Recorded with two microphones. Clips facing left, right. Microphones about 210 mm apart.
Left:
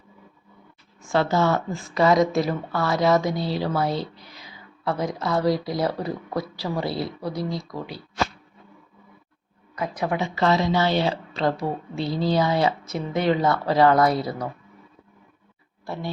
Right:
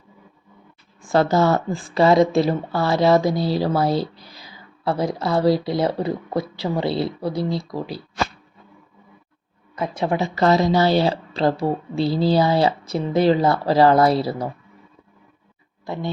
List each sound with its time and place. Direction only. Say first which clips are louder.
1.0 s a woman's voice: right 4 dB; 40° right (ahead or behind)
9.7 s a woman's voice: right 3 dB; 25° right (ahead or behind)
15.9 s speech: right 4 dB; 20° right (ahead or behind)